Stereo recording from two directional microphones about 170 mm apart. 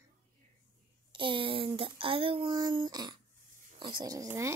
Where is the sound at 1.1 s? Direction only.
30° right (ahead or behind).